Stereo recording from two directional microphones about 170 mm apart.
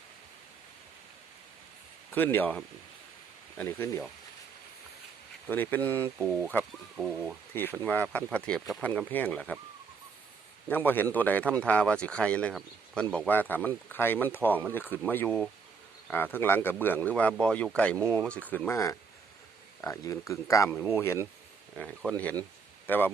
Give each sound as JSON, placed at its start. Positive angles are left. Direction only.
{"t": 2.1, "sound": "a man's voice", "side_deg": 10}
{"t": 3.6, "sound": "a man's voice", "side_deg": 15}
{"t": 5.5, "sound": "a man's voice", "side_deg": 10}
{"t": 6.1, "sound": "speech", "side_deg": -5}
{"t": 7.5, "sound": "a man's voice", "side_deg": 10}
{"t": 10.7, "sound": "a man's voice", "side_deg": 10}
{"t": 21.8, "sound": "a man's voice", "side_deg": 5}